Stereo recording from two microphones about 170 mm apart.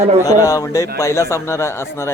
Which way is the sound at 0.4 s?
20° left (ahead or behind).